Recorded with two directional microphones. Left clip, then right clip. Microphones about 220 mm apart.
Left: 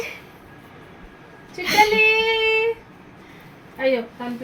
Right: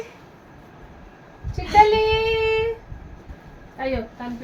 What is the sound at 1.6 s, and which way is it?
Speech, 15° left (ahead or behind).